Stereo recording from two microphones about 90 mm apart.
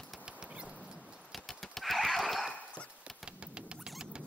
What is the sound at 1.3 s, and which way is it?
Neigh, centre (ahead or behind).